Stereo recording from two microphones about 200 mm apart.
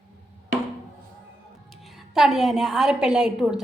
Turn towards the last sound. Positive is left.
turn(degrees=-5)  # may be behind; listen again after turning